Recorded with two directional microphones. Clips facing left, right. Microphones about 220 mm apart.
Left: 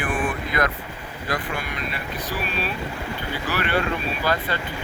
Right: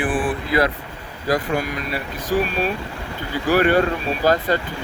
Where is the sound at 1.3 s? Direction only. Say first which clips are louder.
Right 8 dB; 40° right (ahead or behind).